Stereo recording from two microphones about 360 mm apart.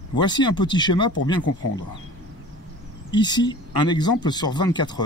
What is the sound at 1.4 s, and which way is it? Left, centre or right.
Speech, left.